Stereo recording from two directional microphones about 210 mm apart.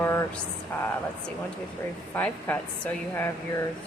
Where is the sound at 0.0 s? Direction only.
15° left (ahead or behind).